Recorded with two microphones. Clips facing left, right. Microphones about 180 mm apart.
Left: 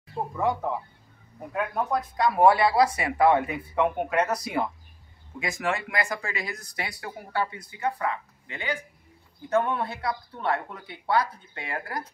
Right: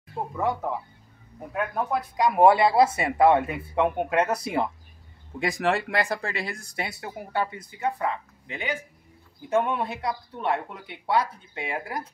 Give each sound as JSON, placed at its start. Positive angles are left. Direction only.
{"t": 0.4, "sound": "speech", "side_deg": 0}
{"t": 2.1, "sound": "speech", "side_deg": -15}
{"t": 5.4, "sound": "speech", "side_deg": -35}